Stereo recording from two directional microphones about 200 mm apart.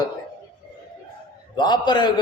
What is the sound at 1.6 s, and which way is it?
Speech, 20° left (ahead or behind).